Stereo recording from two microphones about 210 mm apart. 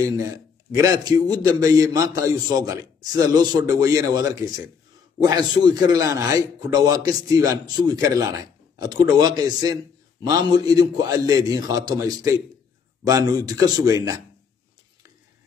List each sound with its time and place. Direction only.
0.7 s a man's voice: 15° right (ahead or behind)